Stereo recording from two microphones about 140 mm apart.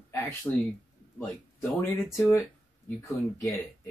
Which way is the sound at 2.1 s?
20° left (ahead or behind).